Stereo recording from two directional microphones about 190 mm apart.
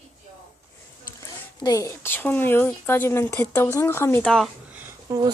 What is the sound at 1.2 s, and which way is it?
Speech, 20° left (ahead or behind).